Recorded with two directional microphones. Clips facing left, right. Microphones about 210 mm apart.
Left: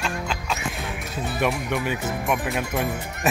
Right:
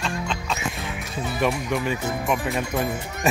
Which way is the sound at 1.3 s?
Centre (ahead or behind).